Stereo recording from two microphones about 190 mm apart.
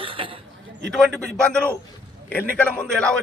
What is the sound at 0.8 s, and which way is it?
A man's voice, centre (ahead or behind).